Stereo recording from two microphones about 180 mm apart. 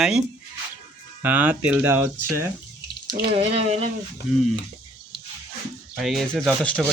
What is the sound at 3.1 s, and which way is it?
Speech, 30° right (ahead or behind).